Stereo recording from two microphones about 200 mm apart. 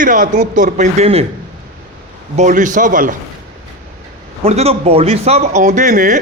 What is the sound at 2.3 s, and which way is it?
Speech, 40° right (ahead or behind).